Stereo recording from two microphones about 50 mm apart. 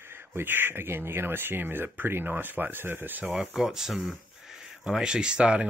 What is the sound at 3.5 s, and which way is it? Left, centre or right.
Speech, centre.